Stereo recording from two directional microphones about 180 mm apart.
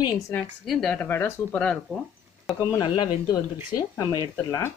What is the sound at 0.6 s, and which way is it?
Speech, 5° left (ahead or behind).